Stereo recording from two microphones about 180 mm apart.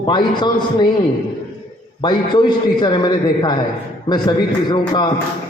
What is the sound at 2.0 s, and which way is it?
A man's voice, 25° left (ahead or behind).